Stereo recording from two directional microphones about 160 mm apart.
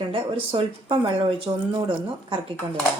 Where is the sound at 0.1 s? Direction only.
35° right (ahead or behind).